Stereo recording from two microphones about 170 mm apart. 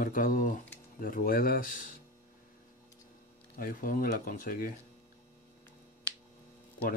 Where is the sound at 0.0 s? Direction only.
55° left (ahead or behind).